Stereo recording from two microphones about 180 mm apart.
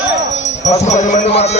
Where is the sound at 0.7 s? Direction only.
40° left (ahead or behind).